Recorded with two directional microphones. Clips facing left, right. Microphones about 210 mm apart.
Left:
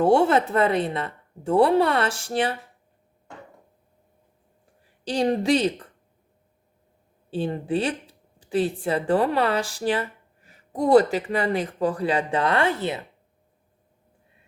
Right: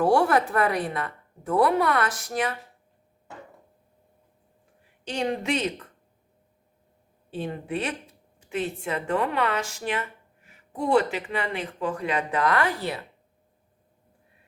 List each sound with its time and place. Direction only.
0.0 s a woman's voice: 25° left (ahead or behind)
5.0 s a woman's voice: 35° left (ahead or behind)
7.3 s speech: 30° left (ahead or behind)